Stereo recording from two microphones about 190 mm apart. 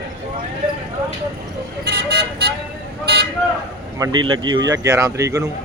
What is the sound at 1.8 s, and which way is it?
Vehicle, 65° right (ahead or behind).